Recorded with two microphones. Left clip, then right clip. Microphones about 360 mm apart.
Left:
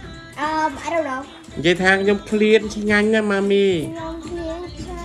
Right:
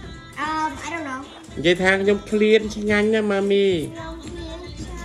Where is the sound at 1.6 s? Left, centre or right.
Centre.